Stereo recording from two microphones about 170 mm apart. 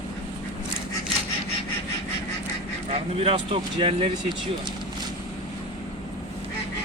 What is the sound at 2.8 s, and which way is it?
Speech, 35° right (ahead or behind).